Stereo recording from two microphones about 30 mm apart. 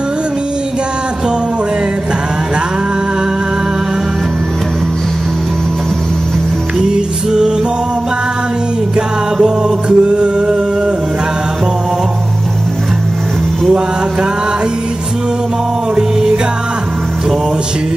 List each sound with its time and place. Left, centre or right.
6.8 s music: right
8.9 s music: right
16.0 s music: centre